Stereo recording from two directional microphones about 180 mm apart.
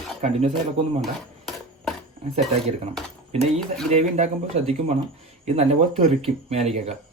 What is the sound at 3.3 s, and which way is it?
Speech, 35° right (ahead or behind).